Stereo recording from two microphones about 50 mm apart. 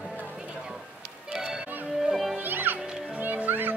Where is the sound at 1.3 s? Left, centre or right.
Centre.